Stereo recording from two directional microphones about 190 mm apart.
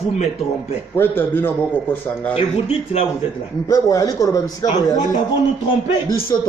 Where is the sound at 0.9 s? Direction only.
10° left (ahead or behind).